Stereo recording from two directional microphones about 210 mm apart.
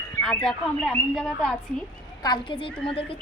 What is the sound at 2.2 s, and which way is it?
Speech, 20° left (ahead or behind).